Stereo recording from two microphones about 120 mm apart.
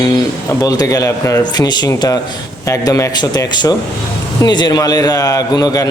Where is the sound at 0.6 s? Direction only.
30° left (ahead or behind).